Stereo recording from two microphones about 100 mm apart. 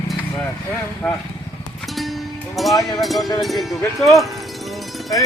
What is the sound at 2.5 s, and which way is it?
Cowbell, centre (ahead or behind).